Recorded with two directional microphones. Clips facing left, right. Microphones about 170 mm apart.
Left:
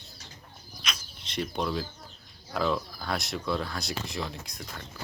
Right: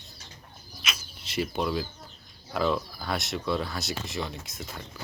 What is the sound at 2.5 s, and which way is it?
Speech, 5° right (ahead or behind).